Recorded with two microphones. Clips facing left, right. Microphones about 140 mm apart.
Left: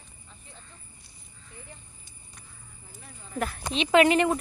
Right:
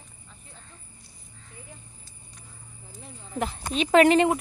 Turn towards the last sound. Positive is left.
turn(degrees=-20)  # may be behind; listen again after turning